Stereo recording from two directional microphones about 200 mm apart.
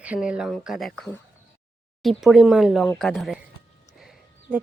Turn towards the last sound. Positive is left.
turn(degrees=0)  # may be behind; listen again after turning